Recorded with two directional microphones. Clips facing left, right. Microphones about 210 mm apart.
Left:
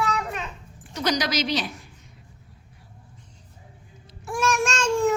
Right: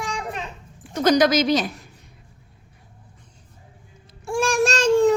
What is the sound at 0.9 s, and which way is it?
Speech, 50° right (ahead or behind).